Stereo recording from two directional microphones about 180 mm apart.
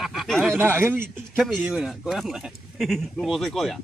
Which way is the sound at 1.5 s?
5° right (ahead or behind).